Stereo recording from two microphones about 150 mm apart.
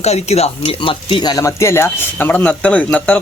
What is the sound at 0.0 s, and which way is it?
Speech, 45° left (ahead or behind).